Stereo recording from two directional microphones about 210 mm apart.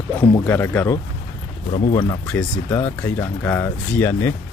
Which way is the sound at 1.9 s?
20° left (ahead or behind).